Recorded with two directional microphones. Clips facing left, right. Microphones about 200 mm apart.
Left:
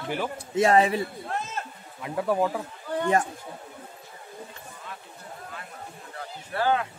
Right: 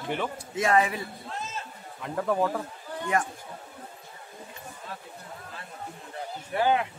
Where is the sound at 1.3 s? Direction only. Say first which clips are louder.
Left 4 dB; 60° left (ahead or behind).